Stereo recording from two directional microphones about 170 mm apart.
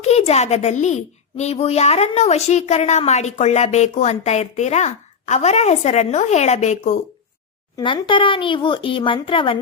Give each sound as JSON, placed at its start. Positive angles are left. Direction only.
{"t": 0.0, "sound": "speech", "side_deg": 40}
{"t": 7.8, "sound": "speech", "side_deg": 25}